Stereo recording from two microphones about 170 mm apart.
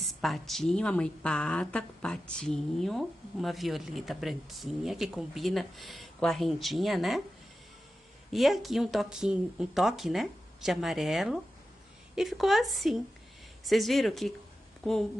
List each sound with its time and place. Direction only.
0.2 s a woman's voice: centre (ahead or behind)
8.3 s a woman's voice: centre (ahead or behind)